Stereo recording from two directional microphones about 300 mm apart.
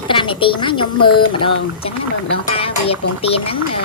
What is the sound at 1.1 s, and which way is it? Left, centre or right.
Speech, centre.